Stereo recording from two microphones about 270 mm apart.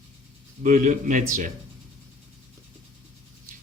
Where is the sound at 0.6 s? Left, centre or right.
Right.